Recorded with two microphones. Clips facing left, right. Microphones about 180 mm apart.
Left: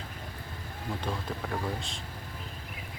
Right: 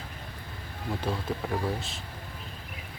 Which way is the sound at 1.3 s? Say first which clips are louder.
Right 4 dB; 5° right (ahead or behind).